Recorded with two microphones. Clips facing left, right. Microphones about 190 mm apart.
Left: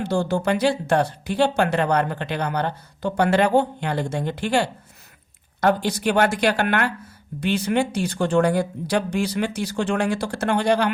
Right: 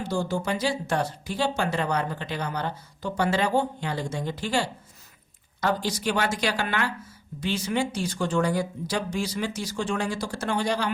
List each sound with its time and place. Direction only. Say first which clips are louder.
0.0 s a woman's voice: left 5 dB; 65° left (ahead or behind)